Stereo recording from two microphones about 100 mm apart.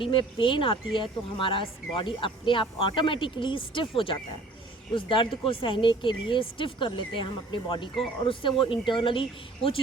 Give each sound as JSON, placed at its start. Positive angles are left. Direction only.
{"t": 0.0, "sound": "speech", "side_deg": 60}